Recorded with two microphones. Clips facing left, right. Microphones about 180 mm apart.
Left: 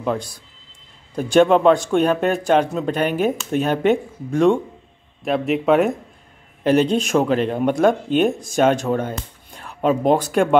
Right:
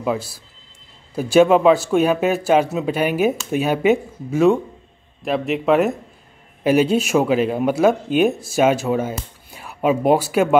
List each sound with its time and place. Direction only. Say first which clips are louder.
0.0 s speech: right 1 dB; 5° right (ahead or behind)